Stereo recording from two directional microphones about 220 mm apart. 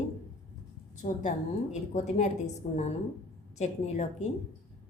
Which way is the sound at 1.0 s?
35° left (ahead or behind).